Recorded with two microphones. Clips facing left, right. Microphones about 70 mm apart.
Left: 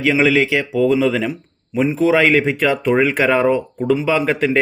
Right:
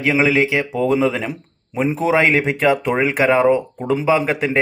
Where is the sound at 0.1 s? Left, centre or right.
Centre.